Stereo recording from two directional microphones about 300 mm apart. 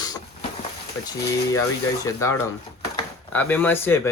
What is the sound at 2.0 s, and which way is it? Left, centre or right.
Speech, centre.